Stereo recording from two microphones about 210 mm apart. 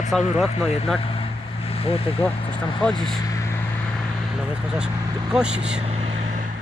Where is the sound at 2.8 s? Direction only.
5° left (ahead or behind).